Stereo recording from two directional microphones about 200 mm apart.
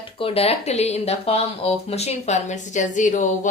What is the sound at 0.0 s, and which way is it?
Speech, 25° left (ahead or behind).